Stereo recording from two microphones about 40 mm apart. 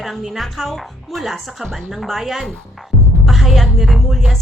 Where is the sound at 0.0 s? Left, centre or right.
Centre.